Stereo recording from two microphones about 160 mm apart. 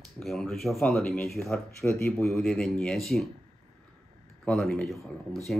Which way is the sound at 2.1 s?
5° left (ahead or behind).